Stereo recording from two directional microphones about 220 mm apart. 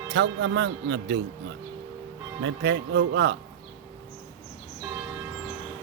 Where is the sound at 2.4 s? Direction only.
55° right (ahead or behind).